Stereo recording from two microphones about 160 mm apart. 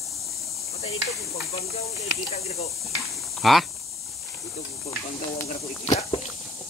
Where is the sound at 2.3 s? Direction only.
40° left (ahead or behind).